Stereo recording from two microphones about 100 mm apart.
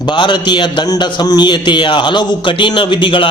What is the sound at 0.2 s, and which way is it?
A man's voice, 50° left (ahead or behind).